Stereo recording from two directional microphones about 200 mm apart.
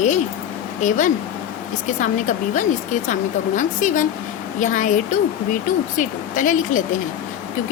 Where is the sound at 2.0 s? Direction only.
40° left (ahead or behind).